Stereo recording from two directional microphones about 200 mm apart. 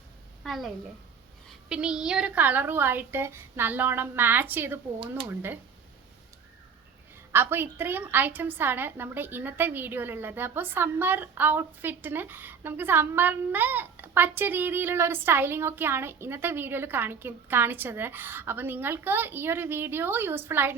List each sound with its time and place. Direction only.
0.4 s a woman's voice: centre (ahead or behind)
1.7 s a woman's voice: 5° right (ahead or behind)
7.3 s a woman's voice: 10° right (ahead or behind)